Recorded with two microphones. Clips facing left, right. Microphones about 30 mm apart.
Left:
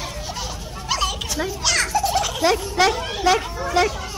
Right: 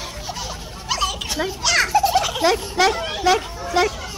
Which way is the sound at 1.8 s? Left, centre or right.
Centre.